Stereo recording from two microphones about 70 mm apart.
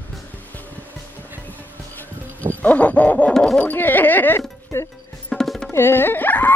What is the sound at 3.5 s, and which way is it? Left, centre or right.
Speech, left.